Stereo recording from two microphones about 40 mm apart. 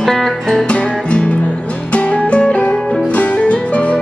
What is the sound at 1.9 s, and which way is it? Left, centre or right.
Music, left.